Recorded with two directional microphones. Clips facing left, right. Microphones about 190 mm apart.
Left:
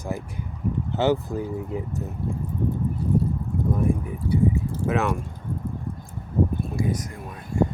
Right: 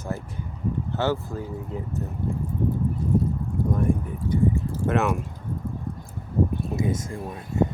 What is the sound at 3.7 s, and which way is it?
Speech, 5° left (ahead or behind).